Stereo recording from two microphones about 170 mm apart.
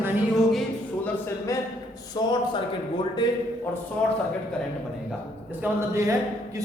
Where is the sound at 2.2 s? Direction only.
25° left (ahead or behind).